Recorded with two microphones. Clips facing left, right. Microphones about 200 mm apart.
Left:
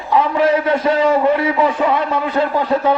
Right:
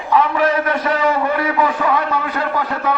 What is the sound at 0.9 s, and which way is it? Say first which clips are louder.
A man's voice: left 5 dB; 25° left (ahead or behind).